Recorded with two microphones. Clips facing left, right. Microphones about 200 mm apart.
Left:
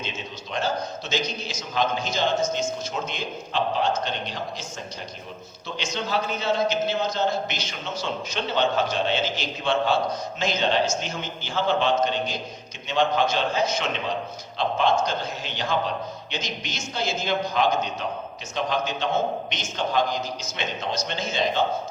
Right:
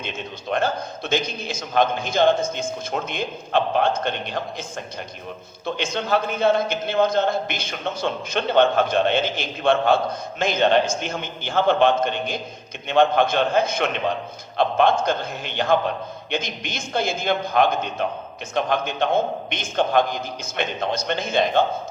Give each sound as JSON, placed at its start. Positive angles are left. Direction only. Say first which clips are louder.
{"t": 0.5, "sound": "a man's voice", "louder": "right 3 dB", "side_deg": -55}
{"t": 5.6, "sound": "a man's voice", "louder": "right 5 dB", "side_deg": -55}